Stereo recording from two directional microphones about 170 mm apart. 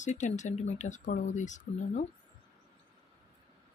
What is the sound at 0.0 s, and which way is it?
Speech, 45° left (ahead or behind).